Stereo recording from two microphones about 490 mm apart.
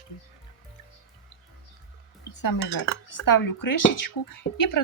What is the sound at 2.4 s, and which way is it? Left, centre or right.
Speech, left.